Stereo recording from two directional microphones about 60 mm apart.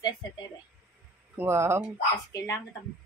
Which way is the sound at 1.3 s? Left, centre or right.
Right.